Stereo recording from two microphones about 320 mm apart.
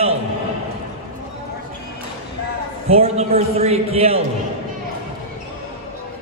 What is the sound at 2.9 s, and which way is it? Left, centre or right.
A man's voice, centre.